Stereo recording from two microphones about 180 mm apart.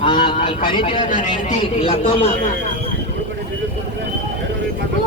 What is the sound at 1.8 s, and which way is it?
Speech, 30° left (ahead or behind).